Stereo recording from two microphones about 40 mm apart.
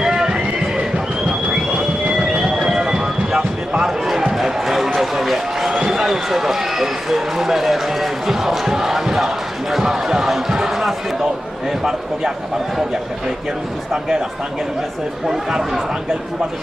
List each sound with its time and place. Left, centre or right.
0.0 s neigh: centre
0.9 s a sound: right
2.1 s music: centre
3.8 s basketball bounce: centre
4.4 s a sound: centre
4.9 s run: centre
9.7 s basketball bounce: centre
10.6 s a sound: centre
15.3 s speech: centre